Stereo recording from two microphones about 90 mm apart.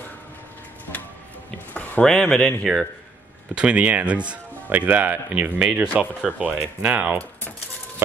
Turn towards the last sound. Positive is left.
turn(degrees=-15)  # may be behind; listen again after turning